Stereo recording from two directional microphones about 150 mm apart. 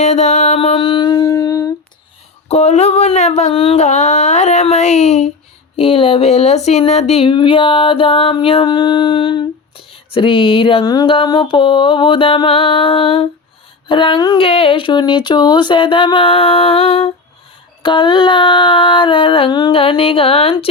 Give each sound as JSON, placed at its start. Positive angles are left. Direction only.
{"t": 0.0, "sound": "music", "side_deg": 50}
{"t": 2.5, "sound": "a sound", "side_deg": 50}
{"t": 5.7, "sound": "speech", "side_deg": 40}